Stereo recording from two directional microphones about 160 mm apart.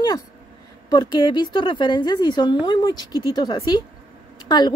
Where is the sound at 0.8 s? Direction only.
25° left (ahead or behind).